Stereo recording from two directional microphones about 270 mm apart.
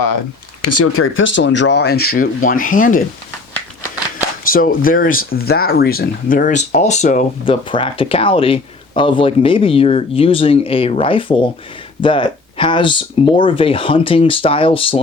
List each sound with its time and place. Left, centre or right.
0.6 s speech: left
4.4 s speech: left